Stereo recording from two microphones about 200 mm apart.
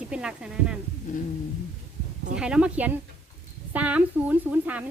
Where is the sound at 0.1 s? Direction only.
5° right (ahead or behind).